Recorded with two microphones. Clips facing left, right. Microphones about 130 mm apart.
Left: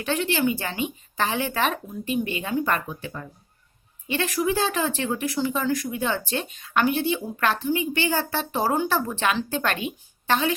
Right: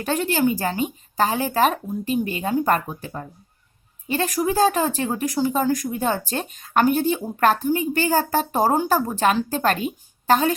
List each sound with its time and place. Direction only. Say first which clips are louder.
0.0 s speech: right 3 dB; 40° right (ahead or behind)